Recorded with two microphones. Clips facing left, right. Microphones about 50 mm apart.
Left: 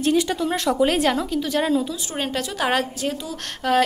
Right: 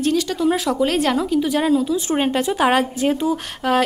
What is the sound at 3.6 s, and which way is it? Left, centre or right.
Speech, centre.